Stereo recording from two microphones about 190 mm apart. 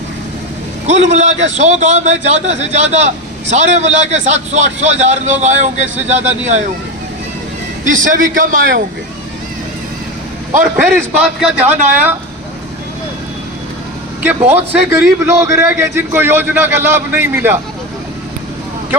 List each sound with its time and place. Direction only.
0.9 s a man's voice: 35° right (ahead or behind)
7.9 s a man's voice: 45° right (ahead or behind)
10.5 s a man's voice: 45° right (ahead or behind)
11.2 s a man's voice: 10° right (ahead or behind)
14.5 s a man's voice: 10° right (ahead or behind)